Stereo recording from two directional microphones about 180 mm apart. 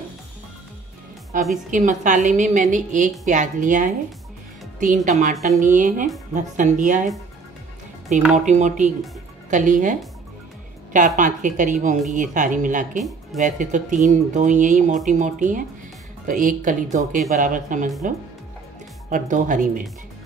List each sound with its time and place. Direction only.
1.3 s speech: 50° right (ahead or behind)
8.1 s speech: 40° right (ahead or behind)